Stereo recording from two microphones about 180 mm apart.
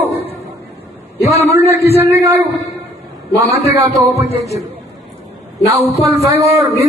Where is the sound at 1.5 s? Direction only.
15° right (ahead or behind).